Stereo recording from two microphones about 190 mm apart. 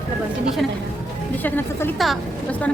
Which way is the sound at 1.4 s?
10° left (ahead or behind).